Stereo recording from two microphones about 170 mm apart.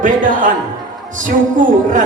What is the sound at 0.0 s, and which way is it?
A woman's voice, 50° right (ahead or behind).